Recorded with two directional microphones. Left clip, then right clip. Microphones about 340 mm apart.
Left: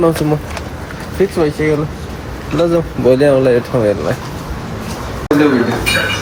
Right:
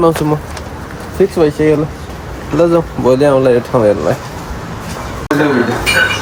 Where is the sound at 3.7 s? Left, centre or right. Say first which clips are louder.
Right 4 dB; centre.